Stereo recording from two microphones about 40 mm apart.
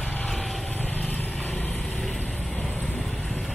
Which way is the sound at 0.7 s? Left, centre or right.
Left.